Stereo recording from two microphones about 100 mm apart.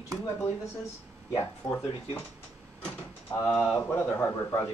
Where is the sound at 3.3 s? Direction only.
40° left (ahead or behind).